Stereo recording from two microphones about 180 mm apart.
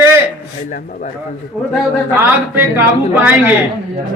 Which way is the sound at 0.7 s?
45° left (ahead or behind).